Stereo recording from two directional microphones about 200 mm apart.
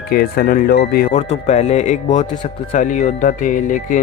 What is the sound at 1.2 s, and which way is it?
Speech, 35° left (ahead or behind).